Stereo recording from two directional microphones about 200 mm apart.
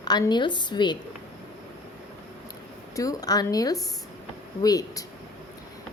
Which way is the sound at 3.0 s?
20° left (ahead or behind).